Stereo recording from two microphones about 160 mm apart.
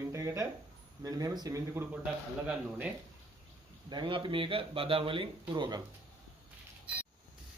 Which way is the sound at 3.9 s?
30° right (ahead or behind).